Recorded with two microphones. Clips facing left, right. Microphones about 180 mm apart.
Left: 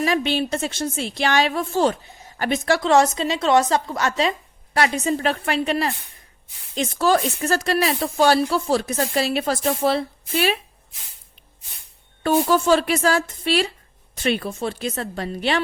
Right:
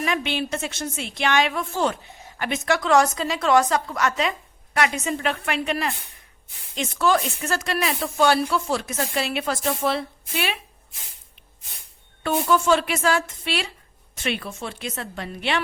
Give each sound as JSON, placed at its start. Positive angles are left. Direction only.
{"t": 0.0, "sound": "a woman's voice", "side_deg": 35}
{"t": 12.2, "sound": "speech", "side_deg": 35}